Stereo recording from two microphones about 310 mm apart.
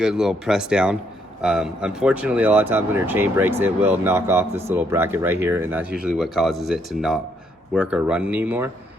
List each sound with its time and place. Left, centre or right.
0.0 s speech: centre